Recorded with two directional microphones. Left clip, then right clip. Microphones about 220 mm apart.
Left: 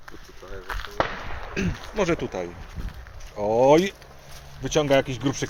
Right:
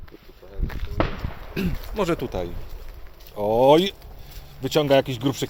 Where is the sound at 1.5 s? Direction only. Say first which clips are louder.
Even; 15° right (ahead or behind).